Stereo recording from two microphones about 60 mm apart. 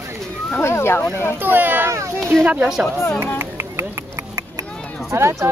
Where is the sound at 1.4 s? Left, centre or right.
Right.